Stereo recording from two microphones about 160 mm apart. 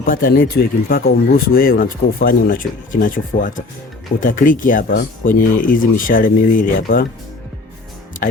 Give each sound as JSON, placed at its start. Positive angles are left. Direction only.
{"t": 0.0, "sound": "speech", "side_deg": 65}